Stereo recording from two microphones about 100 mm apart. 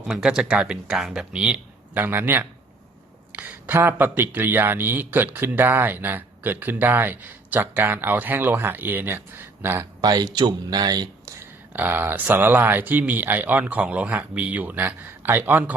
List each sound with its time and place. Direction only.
0.2 s speech: 10° right (ahead or behind)
2.0 s speech: 20° right (ahead or behind)
10.0 s speech: 45° right (ahead or behind)
11.3 s speech: 20° right (ahead or behind)